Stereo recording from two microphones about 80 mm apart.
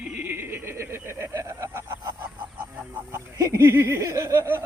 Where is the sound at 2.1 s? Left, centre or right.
Right.